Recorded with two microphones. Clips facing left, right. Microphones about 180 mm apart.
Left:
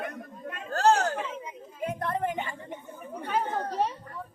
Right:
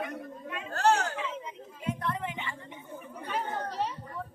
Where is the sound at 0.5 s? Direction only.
35° left (ahead or behind).